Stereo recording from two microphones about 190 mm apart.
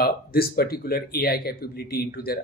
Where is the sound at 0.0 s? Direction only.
55° left (ahead or behind).